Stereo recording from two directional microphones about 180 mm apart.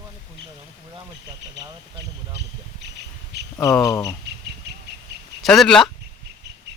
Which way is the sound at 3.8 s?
20° left (ahead or behind).